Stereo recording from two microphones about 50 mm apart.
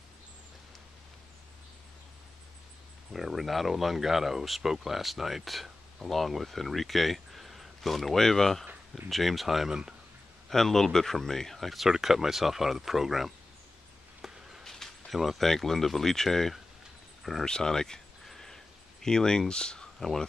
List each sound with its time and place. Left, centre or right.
3.1 s speech: centre
10.5 s speech: centre
14.2 s a sound: centre
14.6 s speech: centre
18.3 s a sound: centre
20.0 s speech: centre